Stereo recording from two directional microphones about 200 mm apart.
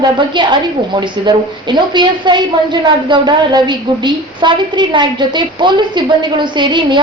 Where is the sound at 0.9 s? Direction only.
20° right (ahead or behind).